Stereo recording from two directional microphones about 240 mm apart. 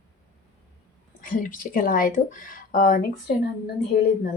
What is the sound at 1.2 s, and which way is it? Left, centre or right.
Speech, left.